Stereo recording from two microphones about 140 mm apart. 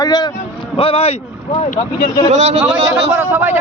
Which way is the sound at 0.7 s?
40° left (ahead or behind).